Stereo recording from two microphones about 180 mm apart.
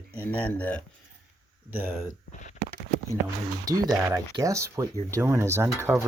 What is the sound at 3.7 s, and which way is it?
Speech, 20° right (ahead or behind).